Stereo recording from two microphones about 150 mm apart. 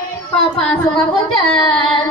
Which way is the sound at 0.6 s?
10° left (ahead or behind).